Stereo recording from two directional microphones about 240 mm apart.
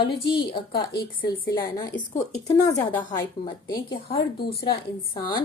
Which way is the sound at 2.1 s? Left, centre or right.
Left.